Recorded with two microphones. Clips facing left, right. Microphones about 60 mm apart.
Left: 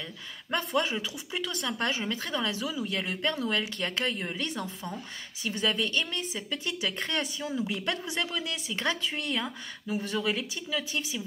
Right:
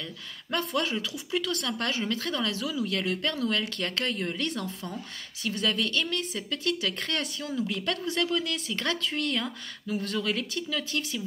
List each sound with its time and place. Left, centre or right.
0.7 s a woman's voice: centre